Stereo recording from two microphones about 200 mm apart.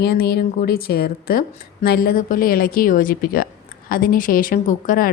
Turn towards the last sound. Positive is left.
turn(degrees=45)  # may be behind; listen again after turning